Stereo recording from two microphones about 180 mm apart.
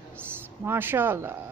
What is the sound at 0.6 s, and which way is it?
Speech, 15° right (ahead or behind).